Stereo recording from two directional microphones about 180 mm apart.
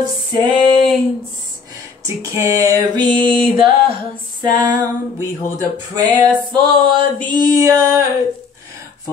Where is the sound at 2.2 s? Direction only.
15° right (ahead or behind).